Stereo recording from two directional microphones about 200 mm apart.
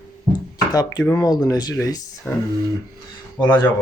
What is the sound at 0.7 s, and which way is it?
Speech, 20° left (ahead or behind).